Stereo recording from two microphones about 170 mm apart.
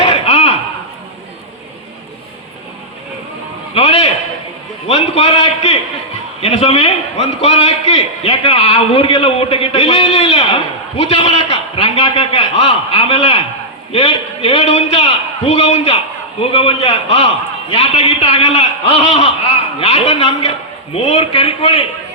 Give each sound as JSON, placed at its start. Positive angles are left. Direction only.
{"t": 0.0, "sound": "chop", "side_deg": 35}
{"t": 3.8, "sound": "a sound", "side_deg": 40}
{"t": 4.9, "sound": "a man's voice", "side_deg": 35}